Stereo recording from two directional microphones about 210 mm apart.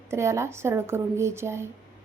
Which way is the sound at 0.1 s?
15° right (ahead or behind).